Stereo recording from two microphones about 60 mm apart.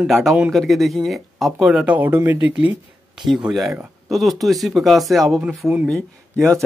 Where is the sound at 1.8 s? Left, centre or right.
Right.